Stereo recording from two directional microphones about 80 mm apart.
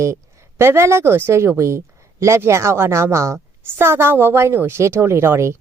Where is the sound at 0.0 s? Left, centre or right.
Right.